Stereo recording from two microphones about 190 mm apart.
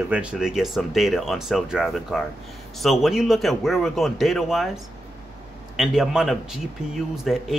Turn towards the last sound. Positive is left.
turn(degrees=0)  # may be behind; listen again after turning